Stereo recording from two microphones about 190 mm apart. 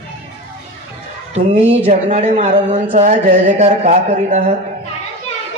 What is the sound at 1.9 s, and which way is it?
Speech, 35° right (ahead or behind).